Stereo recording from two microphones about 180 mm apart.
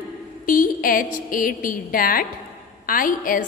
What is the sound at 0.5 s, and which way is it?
A woman's voice, 50° left (ahead or behind).